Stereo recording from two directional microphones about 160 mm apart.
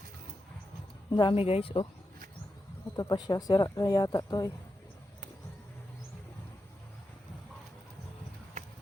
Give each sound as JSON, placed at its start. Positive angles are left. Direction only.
{"t": 1.1, "sound": "speech", "side_deg": 30}
{"t": 2.9, "sound": "speech", "side_deg": 25}